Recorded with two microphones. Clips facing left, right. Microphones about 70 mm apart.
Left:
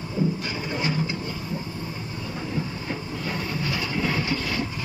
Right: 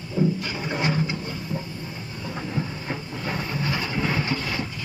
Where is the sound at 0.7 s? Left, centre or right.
Right.